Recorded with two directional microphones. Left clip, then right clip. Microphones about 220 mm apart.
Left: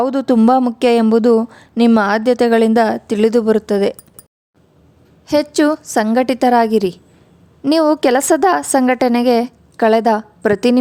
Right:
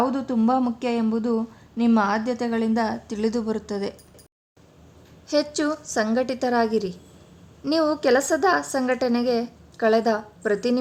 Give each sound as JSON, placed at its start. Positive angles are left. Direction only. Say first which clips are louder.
{"t": 0.0, "sound": "a woman's voice", "louder": "left 9 dB", "side_deg": 50}
{"t": 5.2, "sound": "a woman's voice", "louder": "left 9 dB", "side_deg": 40}